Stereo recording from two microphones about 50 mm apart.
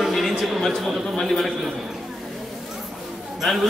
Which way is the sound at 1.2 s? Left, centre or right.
Centre.